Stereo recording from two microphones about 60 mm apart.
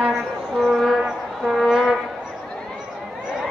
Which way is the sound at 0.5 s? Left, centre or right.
Centre.